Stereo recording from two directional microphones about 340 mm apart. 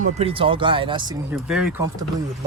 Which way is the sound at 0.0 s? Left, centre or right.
Centre.